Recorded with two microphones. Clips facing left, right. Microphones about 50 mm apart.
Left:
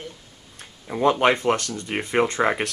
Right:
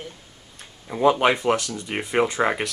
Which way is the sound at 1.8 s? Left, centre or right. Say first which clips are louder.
Left 1 dB; centre.